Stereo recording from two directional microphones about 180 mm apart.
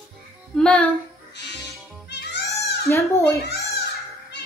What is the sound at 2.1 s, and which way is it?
Music, 70° left (ahead or behind).